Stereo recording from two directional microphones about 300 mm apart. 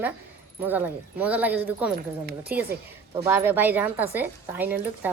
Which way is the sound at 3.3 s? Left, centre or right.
Centre.